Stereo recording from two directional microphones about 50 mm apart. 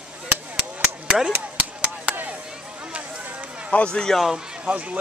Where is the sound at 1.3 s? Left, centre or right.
Right.